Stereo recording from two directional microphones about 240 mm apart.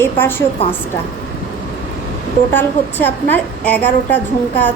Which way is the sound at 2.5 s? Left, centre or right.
Centre.